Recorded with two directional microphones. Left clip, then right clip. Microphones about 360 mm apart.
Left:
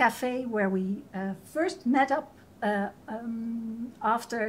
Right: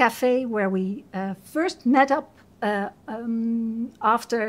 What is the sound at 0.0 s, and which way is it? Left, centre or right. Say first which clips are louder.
A woman's voice: right 6 dB; right.